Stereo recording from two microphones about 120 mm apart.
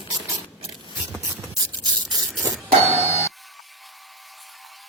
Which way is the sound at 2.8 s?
20° right (ahead or behind).